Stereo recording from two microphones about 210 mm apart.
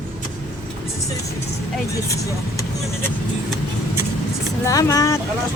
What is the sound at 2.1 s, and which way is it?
Speech, 15° left (ahead or behind).